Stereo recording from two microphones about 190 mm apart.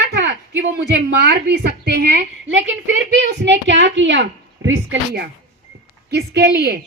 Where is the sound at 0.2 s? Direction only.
65° right (ahead or behind).